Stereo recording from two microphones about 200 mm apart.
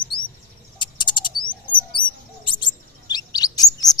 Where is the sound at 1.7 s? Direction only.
25° left (ahead or behind).